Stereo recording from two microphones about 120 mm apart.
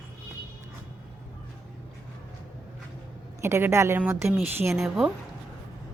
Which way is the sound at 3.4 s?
20° right (ahead or behind).